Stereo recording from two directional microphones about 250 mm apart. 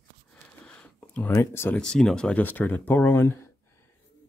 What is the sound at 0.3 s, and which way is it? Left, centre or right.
Speech, centre.